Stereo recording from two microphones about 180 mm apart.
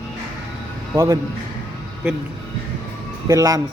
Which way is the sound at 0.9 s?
15° right (ahead or behind).